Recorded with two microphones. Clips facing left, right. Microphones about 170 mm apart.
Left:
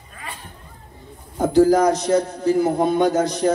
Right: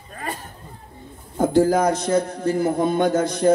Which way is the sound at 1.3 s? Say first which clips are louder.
Left 2 dB; 55° right (ahead or behind).